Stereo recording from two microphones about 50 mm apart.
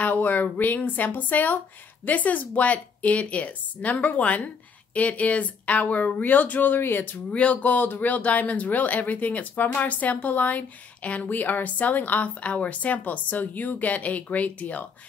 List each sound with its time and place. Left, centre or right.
0.0 s speech: left
7.2 s speech: left
7.7 s speech: left